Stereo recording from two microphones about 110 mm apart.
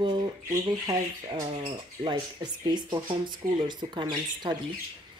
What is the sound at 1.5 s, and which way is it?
Speech, 45° right (ahead or behind).